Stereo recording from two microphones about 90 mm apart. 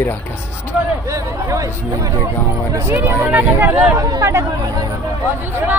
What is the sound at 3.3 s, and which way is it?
Speech, 20° right (ahead or behind).